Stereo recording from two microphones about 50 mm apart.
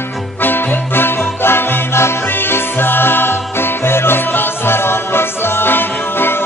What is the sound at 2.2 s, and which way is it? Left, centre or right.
Music, left.